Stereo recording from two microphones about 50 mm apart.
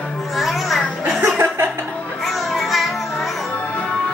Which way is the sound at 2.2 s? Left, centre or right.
Centre.